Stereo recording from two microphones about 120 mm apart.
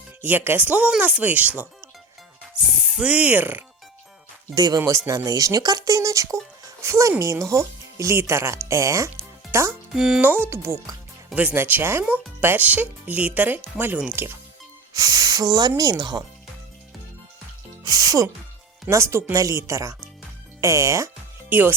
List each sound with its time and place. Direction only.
0.2 s speech: 15° right (ahead or behind)
2.9 s speech: 10° right (ahead or behind)
4.5 s speech: 35° right (ahead or behind)
9.9 s speech: 5° right (ahead or behind)
10.2 s speech: 15° right (ahead or behind)
14.9 s speech: 30° right (ahead or behind)
17.8 s speech: 30° right (ahead or behind)